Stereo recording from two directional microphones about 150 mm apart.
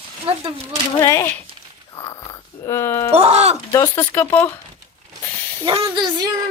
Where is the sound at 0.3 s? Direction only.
40° right (ahead or behind).